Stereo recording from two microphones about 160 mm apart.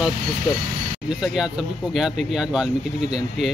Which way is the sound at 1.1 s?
5° right (ahead or behind).